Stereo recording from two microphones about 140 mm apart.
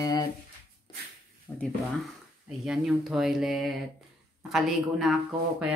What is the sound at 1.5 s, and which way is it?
Speech, 15° left (ahead or behind).